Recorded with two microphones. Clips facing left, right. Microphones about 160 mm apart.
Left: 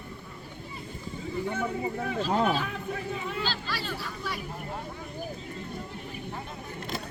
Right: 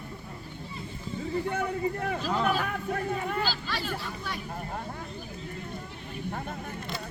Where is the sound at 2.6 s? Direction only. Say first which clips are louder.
Right 3 dB; 55° right (ahead or behind).